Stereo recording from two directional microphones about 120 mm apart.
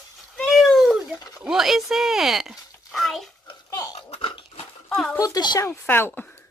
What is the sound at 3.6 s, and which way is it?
Goat, 25° left (ahead or behind).